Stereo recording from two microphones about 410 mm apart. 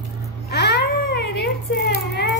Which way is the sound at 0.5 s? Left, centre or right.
Left.